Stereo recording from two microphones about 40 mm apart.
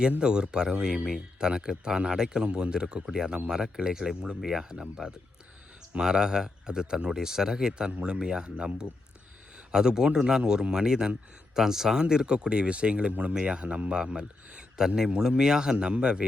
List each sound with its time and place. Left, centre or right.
0.2 s a man's voice: right
14.0 s a man's voice: centre